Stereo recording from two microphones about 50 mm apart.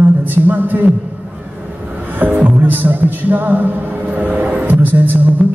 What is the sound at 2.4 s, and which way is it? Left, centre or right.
Speech, right.